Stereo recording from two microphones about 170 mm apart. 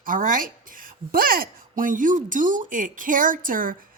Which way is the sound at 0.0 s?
55° right (ahead or behind).